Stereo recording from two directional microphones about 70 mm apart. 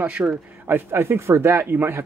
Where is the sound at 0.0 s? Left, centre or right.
Centre.